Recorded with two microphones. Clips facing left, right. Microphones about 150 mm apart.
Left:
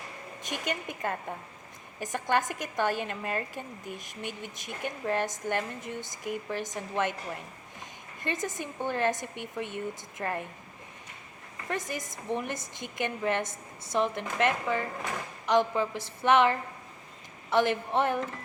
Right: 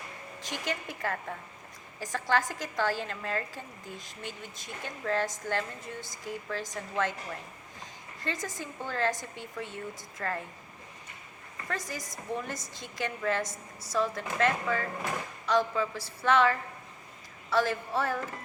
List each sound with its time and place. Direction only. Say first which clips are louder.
0.4 s a woman's voice: left 1 dB; 20° left (ahead or behind)
8.2 s a woman's voice: left 3 dB; 20° left (ahead or behind)
11.7 s a woman's voice: left 3 dB; 20° left (ahead or behind)